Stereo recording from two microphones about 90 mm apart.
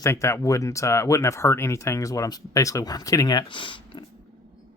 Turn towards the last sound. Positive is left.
turn(degrees=65)  # may be behind; listen again after turning